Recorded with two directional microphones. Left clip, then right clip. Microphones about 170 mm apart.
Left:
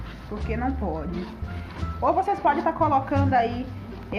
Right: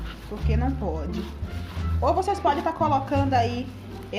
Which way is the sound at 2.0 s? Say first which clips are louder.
Left 1 dB; 30° right (ahead or behind).